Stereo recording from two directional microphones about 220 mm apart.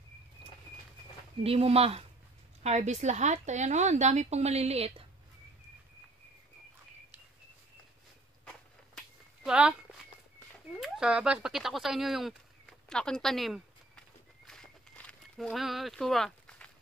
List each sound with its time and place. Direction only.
1.4 s speech: 25° right (ahead or behind)
8.5 s walk: centre (ahead or behind)
10.8 s a sound: 5° right (ahead or behind)